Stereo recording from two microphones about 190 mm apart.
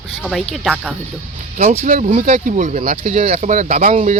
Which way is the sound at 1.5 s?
40° right (ahead or behind).